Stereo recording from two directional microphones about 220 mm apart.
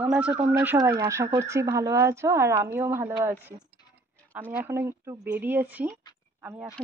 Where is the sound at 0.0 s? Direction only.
5° right (ahead or behind).